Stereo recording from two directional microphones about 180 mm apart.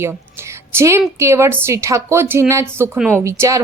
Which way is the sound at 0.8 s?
15° right (ahead or behind).